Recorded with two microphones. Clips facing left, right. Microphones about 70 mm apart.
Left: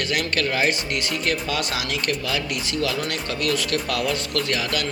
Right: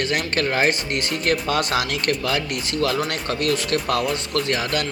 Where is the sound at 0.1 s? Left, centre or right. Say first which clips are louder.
Right 1 dB; right.